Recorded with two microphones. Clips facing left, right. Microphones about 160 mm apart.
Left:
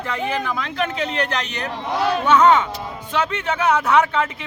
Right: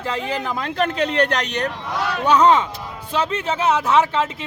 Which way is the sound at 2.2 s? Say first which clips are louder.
Right 1 dB; 35° right (ahead or behind).